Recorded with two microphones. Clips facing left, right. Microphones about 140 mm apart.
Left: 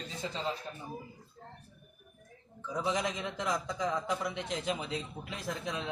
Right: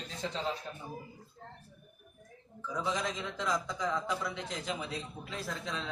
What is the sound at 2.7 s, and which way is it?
A man's voice, 20° left (ahead or behind).